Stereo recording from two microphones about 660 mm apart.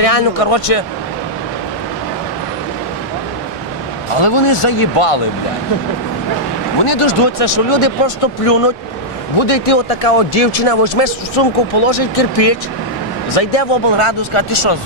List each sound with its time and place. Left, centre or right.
0.0 s speech: left
4.2 s speech: left
6.9 s speech: left